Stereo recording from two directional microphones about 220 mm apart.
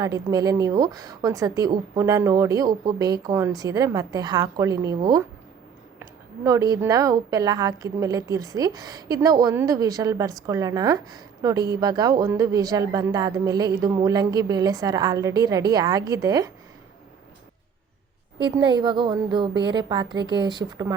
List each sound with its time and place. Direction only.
0.0 s a woman's voice: 15° right (ahead or behind)
6.0 s a woman's voice: 15° right (ahead or behind)
18.3 s a woman's voice: 20° right (ahead or behind)